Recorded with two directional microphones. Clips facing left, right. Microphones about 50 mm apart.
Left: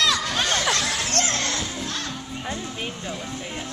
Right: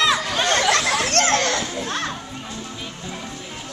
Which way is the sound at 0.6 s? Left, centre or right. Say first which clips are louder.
Right 5 dB; right.